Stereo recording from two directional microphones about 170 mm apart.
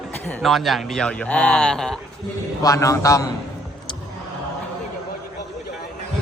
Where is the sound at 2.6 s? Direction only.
20° left (ahead or behind).